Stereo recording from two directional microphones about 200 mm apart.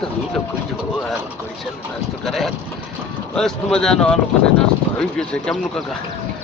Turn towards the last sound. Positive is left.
turn(degrees=5)  # may be behind; listen again after turning